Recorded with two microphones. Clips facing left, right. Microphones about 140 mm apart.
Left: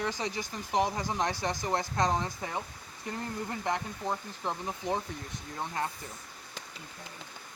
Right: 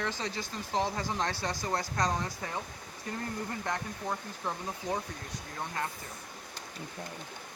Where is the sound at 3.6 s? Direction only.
20° left (ahead or behind).